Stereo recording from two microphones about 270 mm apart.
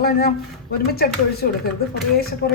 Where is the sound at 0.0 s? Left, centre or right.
Left.